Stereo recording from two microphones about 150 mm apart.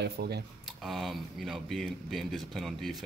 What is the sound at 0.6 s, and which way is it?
Speech, centre (ahead or behind).